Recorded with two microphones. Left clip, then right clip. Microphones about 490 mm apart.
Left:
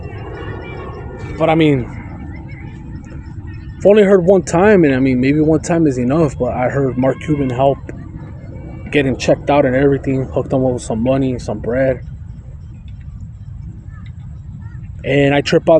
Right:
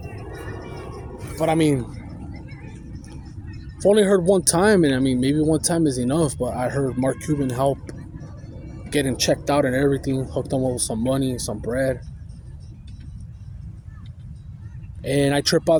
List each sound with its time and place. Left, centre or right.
1.4 s speech: right
3.8 s speech: right
15.0 s speech: right